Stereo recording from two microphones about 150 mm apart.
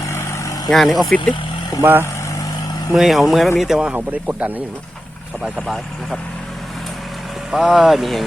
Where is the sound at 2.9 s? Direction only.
Centre (ahead or behind).